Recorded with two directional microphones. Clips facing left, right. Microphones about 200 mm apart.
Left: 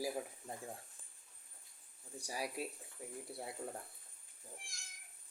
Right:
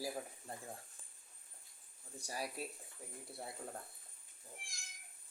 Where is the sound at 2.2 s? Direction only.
15° left (ahead or behind).